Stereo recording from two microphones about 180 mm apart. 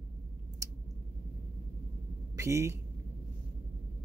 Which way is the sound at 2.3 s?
15° right (ahead or behind).